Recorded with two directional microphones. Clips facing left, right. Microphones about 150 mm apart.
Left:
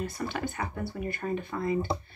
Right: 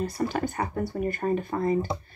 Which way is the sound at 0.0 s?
40° right (ahead or behind).